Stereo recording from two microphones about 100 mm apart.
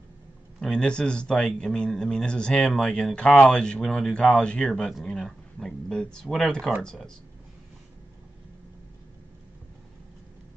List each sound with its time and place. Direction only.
0.6 s a man's voice: 5° left (ahead or behind)